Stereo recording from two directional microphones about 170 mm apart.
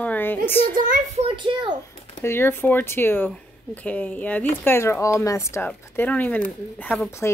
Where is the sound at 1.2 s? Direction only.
30° right (ahead or behind).